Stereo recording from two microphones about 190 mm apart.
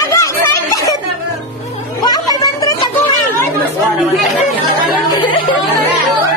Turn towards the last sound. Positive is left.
turn(degrees=25)  # may be behind; listen again after turning